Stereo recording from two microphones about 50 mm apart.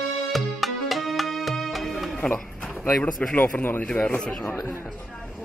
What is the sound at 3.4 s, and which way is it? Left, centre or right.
Speech, left.